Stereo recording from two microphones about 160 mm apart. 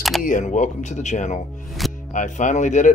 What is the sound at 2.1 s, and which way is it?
Speech, 50° left (ahead or behind).